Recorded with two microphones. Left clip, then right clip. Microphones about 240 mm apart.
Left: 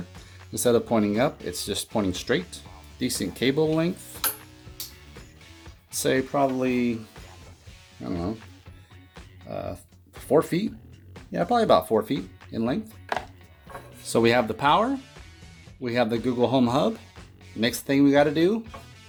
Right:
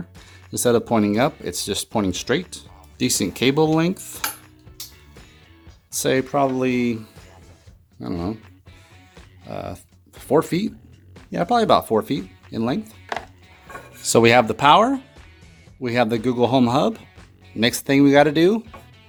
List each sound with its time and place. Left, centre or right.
0.5 s speech: right
5.9 s speech: right
8.0 s speech: right
9.5 s speech: right
14.0 s speech: right
17.6 s speech: right